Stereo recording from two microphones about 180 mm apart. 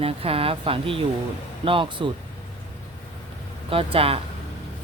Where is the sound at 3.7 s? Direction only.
30° right (ahead or behind).